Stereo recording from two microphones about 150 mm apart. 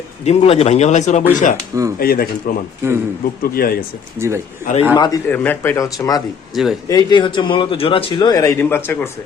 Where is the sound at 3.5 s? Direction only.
90° left.